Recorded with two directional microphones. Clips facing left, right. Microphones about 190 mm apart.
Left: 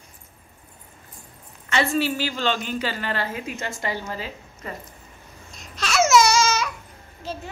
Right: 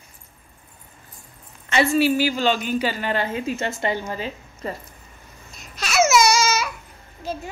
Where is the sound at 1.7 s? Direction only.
10° right (ahead or behind).